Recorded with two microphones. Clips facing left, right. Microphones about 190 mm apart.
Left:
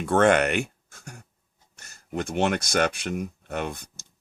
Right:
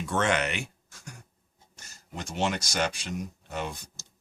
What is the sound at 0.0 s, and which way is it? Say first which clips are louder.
Speech: left 8 dB; 55° left (ahead or behind).